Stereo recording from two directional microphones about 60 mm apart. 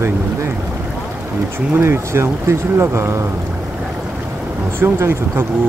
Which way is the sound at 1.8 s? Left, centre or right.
Right.